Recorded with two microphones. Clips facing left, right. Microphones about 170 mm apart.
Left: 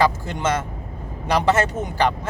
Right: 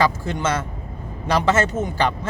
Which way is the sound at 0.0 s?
15° left (ahead or behind).